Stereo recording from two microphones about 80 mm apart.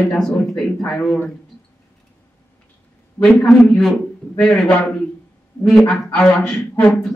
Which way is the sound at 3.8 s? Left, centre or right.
Centre.